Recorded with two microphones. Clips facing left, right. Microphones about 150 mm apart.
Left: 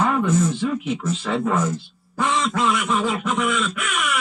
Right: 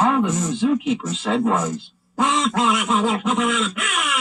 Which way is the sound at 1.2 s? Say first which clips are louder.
Right 2 dB; 20° right (ahead or behind).